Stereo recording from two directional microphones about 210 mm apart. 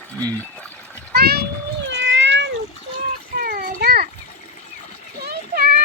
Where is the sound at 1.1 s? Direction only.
50° right (ahead or behind).